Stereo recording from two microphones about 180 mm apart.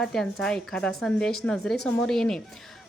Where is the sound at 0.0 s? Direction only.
Centre (ahead or behind).